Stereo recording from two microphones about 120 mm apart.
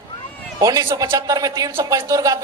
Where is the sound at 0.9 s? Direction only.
25° right (ahead or behind).